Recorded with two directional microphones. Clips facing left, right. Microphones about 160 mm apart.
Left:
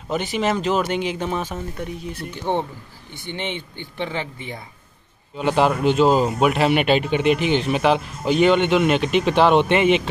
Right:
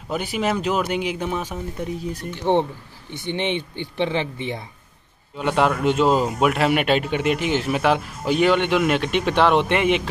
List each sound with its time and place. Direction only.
0.1 s speech: 5° right (ahead or behind)
2.3 s speech: 20° right (ahead or behind)
5.4 s speech: centre (ahead or behind)